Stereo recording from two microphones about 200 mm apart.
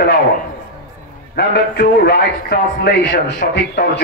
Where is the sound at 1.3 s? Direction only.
55° left (ahead or behind).